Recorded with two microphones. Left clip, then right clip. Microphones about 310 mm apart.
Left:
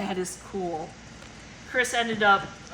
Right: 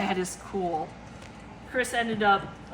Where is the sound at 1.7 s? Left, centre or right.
Centre.